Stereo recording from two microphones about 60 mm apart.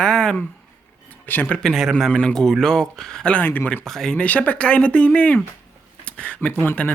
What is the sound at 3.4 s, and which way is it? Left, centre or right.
Speech, left.